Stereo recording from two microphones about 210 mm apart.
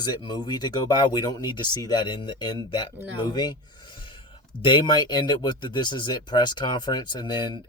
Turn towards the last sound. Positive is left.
turn(degrees=20)  # may be behind; listen again after turning